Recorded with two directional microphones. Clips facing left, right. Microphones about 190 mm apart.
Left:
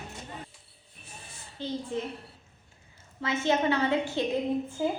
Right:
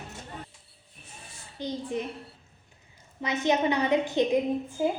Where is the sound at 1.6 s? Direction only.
15° right (ahead or behind).